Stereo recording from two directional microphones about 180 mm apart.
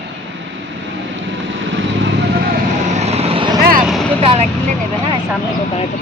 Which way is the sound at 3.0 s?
35° right (ahead or behind).